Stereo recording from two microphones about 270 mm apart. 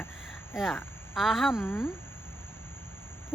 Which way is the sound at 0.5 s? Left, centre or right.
Centre.